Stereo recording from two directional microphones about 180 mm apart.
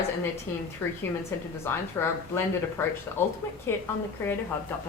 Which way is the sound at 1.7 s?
15° left (ahead or behind).